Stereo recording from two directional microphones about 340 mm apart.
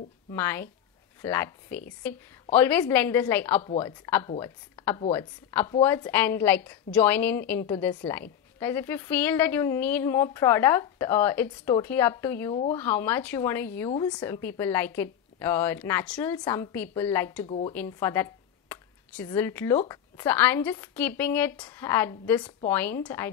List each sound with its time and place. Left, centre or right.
0.3 s a woman's voice: centre
17.5 s a woman's voice: centre